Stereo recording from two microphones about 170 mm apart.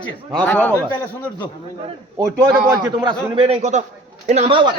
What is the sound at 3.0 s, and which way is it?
A man's voice, 35° right (ahead or behind).